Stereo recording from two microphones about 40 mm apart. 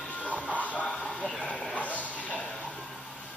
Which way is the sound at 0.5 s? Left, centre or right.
Left.